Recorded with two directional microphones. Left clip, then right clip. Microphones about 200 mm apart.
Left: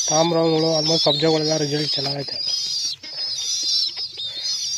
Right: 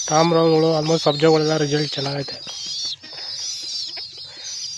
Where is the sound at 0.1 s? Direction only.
20° right (ahead or behind).